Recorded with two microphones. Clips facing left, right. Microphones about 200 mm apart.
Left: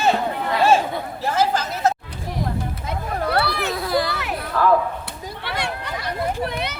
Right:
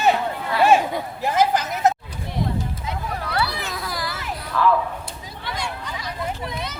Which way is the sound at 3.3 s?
60° left (ahead or behind).